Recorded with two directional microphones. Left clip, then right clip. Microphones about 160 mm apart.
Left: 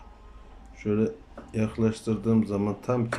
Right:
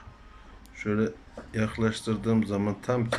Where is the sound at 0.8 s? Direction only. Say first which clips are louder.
Left 2 dB; 10° left (ahead or behind).